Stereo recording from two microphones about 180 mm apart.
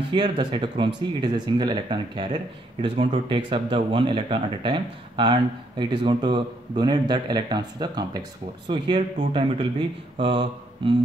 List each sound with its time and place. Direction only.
0.1 s speech: 25° right (ahead or behind)
10.1 s mantra: 30° right (ahead or behind)